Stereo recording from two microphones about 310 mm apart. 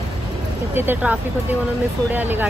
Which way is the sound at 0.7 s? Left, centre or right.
Centre.